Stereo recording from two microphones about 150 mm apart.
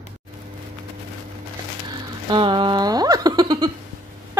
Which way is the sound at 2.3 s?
35° right (ahead or behind).